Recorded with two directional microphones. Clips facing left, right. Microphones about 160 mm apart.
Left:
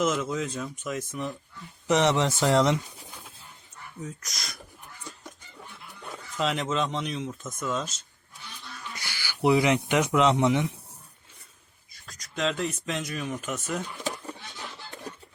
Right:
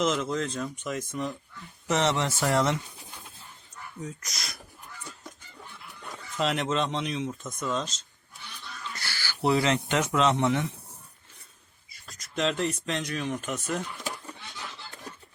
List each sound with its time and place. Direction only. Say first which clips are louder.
0.0 s speech: even; 5° left (ahead or behind)
1.9 s speech: left 3 dB; 15° left (ahead or behind)
4.0 s speech: even; centre (ahead or behind)
6.3 s speech: even; centre (ahead or behind); by 10.7 s 15° left (ahead or behind)
11.9 s speech: even; centre (ahead or behind)